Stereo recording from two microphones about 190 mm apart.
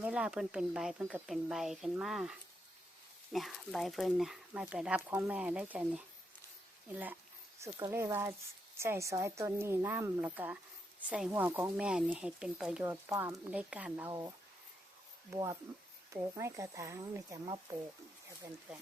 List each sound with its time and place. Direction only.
0.0 s speech: 5° right (ahead or behind)
3.3 s a woman's voice: centre (ahead or behind); by 17.6 s 20° right (ahead or behind)